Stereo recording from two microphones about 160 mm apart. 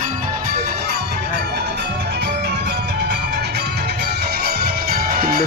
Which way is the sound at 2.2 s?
90° right.